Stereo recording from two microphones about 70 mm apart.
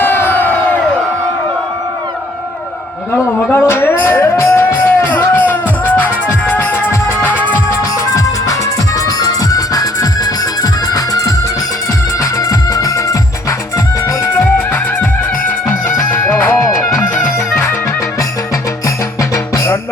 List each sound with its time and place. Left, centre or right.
0.0 s crowd: left
3.5 s music: left
8.1 s music: left
16.6 s music: left
19.3 s music: left